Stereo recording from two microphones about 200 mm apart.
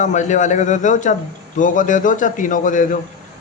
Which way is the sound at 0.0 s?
35° left (ahead or behind).